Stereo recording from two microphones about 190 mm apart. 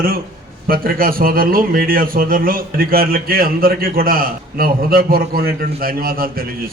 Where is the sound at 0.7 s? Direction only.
50° right (ahead or behind).